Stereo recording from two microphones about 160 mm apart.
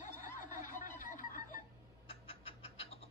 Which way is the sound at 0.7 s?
55° left (ahead or behind).